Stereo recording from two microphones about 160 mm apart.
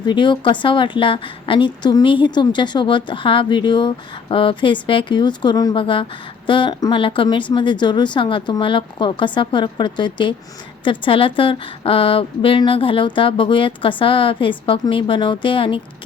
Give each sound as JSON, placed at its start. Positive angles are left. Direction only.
{"t": 0.0, "sound": "a woman's voice", "side_deg": 30}